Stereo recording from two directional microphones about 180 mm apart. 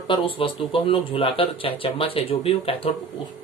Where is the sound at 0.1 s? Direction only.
30° left (ahead or behind).